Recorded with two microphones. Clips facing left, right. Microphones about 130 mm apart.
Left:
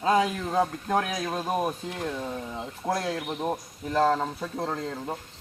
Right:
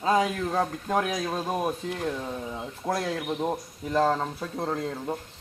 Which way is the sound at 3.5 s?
Centre (ahead or behind).